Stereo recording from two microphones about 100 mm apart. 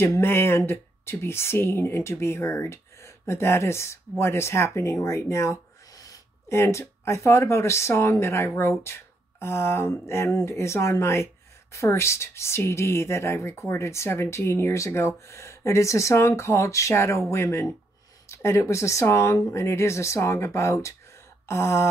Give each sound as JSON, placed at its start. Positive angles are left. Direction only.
{"t": 0.0, "sound": "speech", "side_deg": 25}